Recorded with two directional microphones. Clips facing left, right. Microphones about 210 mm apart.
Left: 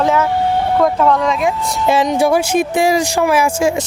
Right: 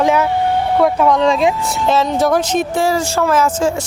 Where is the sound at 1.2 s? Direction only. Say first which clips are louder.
Right 3 dB; 25° right (ahead or behind).